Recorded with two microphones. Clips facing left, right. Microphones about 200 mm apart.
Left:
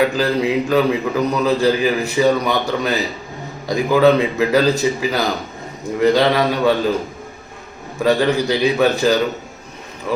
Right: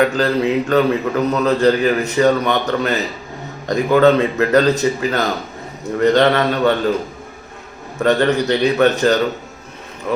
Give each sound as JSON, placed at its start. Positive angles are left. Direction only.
{"t": 0.0, "sound": "a man's voice", "side_deg": 10}
{"t": 7.9, "sound": "a man's voice", "side_deg": 10}